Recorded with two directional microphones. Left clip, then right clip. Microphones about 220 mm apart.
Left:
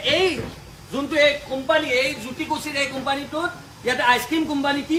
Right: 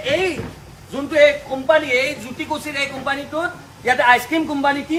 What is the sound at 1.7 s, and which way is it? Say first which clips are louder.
A woman's voice: right 4 dB; 10° left (ahead or behind).